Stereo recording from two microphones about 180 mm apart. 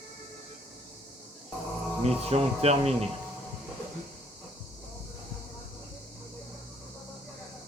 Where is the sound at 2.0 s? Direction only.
35° right (ahead or behind).